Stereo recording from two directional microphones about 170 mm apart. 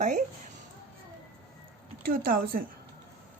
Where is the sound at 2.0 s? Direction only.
60° right (ahead or behind).